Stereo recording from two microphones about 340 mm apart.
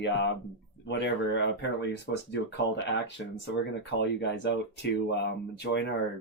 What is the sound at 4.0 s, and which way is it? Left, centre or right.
Speech, left.